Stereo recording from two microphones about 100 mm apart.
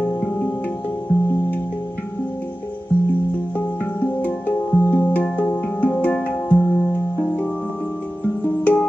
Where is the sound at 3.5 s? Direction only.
15° left (ahead or behind).